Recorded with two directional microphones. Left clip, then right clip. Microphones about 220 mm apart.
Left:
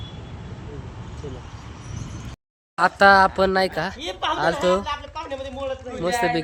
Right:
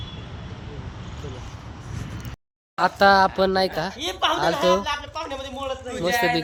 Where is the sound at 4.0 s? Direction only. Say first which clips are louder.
Right 5 dB; 25° right (ahead or behind).